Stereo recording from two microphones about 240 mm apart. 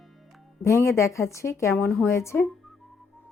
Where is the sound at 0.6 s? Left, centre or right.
Centre.